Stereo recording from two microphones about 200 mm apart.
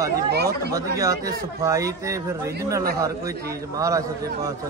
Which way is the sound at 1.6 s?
15° right (ahead or behind).